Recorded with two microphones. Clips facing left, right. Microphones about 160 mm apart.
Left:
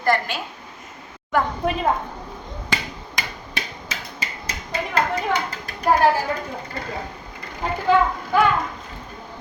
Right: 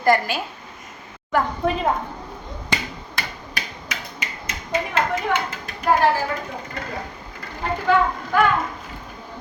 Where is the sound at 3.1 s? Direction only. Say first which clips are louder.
Left 1 dB; 25° left (ahead or behind).